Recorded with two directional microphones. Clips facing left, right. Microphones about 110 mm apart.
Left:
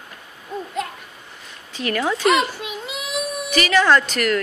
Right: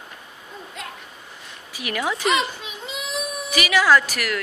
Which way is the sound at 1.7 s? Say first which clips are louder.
Left 4 dB; 15° right (ahead or behind).